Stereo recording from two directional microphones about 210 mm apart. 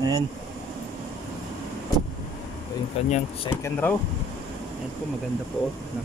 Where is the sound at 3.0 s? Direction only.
30° left (ahead or behind).